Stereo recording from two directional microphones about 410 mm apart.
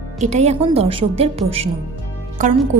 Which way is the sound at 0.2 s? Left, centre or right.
Centre.